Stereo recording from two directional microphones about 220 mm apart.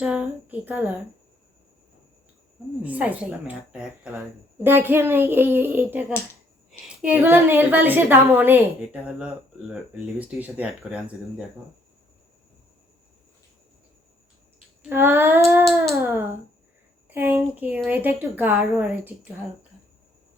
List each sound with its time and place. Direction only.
0.0 s a woman's voice: 5° right (ahead or behind)
2.8 s a woman's voice: 5° right (ahead or behind)
14.8 s a woman's voice: 10° right (ahead or behind)
15.6 s a sound: 5° right (ahead or behind)
17.1 s a woman's voice: 10° right (ahead or behind)